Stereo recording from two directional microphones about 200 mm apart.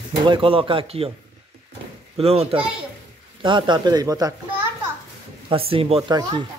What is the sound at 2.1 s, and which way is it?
A child's voice, 30° right (ahead or behind).